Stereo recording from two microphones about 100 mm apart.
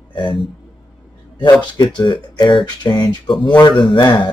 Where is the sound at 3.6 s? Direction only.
60° left (ahead or behind).